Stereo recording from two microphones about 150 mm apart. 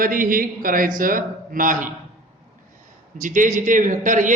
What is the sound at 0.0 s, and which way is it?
A man's voice, 65° right (ahead or behind).